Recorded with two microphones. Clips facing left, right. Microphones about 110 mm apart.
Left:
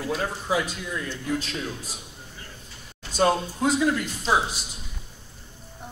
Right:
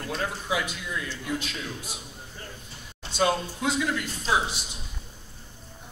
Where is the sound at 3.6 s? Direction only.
40° left (ahead or behind).